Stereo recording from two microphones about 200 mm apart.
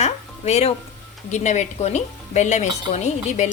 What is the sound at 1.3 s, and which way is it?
Speech, 35° left (ahead or behind).